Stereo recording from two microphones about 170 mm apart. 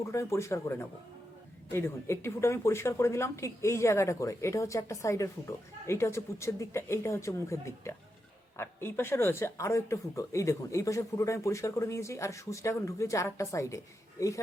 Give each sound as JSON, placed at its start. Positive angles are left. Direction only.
{"t": 0.0, "sound": "speech", "side_deg": 15}